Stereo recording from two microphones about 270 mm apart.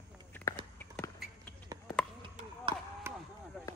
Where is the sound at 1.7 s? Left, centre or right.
Centre.